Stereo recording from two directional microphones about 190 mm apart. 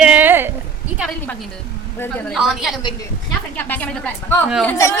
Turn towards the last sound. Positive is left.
turn(degrees=15)  # may be behind; listen again after turning